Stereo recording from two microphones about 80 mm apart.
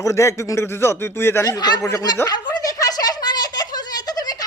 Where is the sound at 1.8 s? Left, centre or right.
Left.